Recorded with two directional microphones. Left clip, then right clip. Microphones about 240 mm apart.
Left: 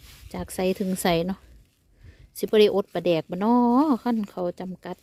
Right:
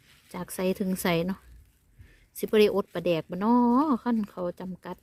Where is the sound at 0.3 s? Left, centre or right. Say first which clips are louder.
Left 3 dB; centre.